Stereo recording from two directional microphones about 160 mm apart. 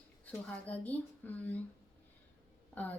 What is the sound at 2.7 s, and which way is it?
Speech, 10° left (ahead or behind).